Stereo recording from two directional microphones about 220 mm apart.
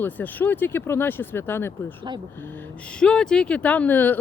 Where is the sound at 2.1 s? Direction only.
20° right (ahead or behind).